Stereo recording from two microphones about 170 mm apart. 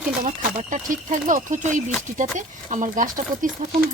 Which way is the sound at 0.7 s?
50° right (ahead or behind).